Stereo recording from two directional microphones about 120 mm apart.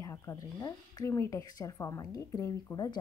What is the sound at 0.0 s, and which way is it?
Speech, 25° left (ahead or behind).